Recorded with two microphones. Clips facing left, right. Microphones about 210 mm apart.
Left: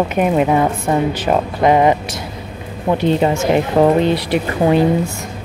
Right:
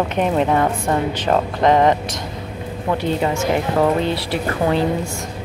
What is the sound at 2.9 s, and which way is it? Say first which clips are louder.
Speech: left 5 dB; 20° left (ahead or behind).